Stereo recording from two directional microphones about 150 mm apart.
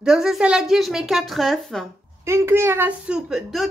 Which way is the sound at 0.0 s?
5° right (ahead or behind).